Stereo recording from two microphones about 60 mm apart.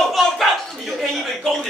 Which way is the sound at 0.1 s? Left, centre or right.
Centre.